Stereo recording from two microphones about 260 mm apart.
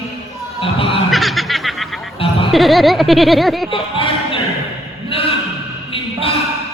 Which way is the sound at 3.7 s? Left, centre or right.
Left.